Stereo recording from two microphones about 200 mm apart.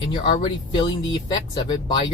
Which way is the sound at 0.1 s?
20° left (ahead or behind).